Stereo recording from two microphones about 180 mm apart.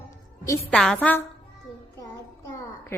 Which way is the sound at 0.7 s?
5° left (ahead or behind).